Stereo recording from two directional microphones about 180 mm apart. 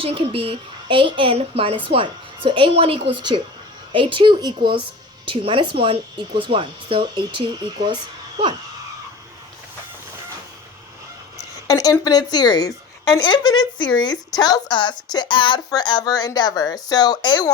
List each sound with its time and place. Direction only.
0.0 s a woman's voice: 30° right (ahead or behind)
11.7 s a woman's voice: 20° left (ahead or behind)